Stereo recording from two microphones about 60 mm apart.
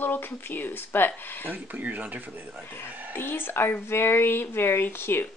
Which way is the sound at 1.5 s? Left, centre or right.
Right.